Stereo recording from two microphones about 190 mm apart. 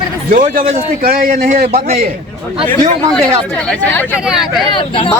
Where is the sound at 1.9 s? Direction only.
50° right (ahead or behind).